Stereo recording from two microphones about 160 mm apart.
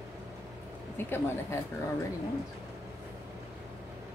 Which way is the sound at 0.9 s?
15° left (ahead or behind).